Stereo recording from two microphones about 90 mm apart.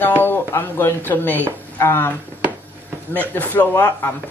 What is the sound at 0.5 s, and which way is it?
Speech, 30° left (ahead or behind).